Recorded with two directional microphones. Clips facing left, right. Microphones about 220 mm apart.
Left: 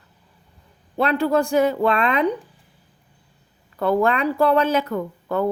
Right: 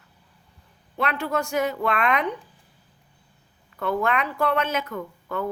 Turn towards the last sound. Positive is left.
turn(degrees=35)  # may be behind; listen again after turning